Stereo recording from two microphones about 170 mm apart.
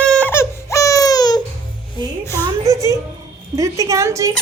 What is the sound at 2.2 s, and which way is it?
Speech, 15° left (ahead or behind).